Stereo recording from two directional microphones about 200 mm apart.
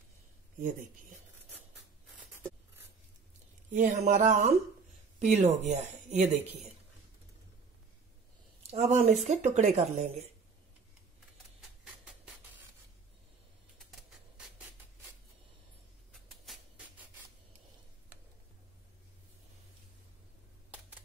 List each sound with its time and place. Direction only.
0.6 s speech: 40° right (ahead or behind)
3.7 s speech: 40° right (ahead or behind)
8.6 s speech: 35° right (ahead or behind)
16.1 s a sound: centre (ahead or behind)